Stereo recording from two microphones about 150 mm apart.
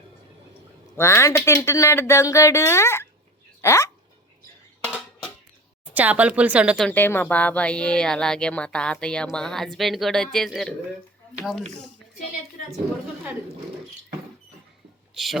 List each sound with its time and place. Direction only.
0.9 s speech: 20° left (ahead or behind)
5.9 s speech: 10° right (ahead or behind)
6.8 s speech: 10° left (ahead or behind)
15.1 s a sound: centre (ahead or behind)